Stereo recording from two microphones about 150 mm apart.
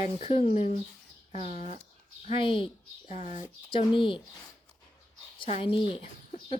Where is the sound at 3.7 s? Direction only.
35° left (ahead or behind).